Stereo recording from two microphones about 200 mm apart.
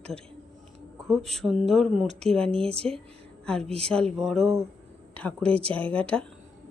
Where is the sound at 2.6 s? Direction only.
30° right (ahead or behind).